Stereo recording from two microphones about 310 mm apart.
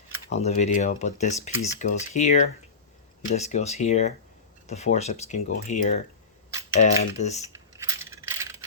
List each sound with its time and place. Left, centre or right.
0.3 s speech: left
7.8 s coin: centre